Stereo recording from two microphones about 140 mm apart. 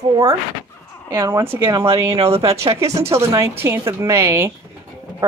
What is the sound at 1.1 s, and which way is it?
Speech, 20° right (ahead or behind).